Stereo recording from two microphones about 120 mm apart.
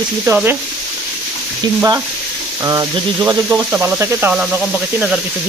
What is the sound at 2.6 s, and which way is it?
Speech, 25° right (ahead or behind).